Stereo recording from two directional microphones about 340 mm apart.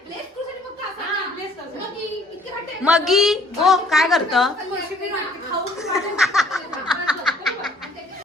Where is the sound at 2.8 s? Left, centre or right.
Centre.